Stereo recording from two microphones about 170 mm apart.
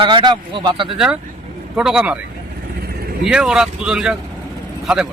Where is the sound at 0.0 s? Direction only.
30° right (ahead or behind).